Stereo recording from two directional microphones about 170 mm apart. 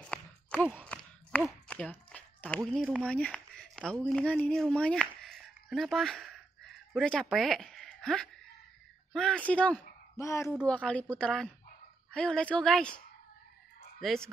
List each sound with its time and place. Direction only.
0.0 s a sound: 5° left (ahead or behind)
3.1 s a woman's voice: 5° left (ahead or behind)
14.0 s speech: centre (ahead or behind)